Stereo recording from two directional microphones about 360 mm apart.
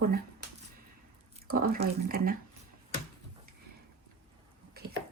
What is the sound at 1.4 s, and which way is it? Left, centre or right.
Speech, right.